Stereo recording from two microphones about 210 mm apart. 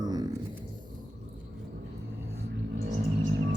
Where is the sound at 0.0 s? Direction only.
20° right (ahead or behind).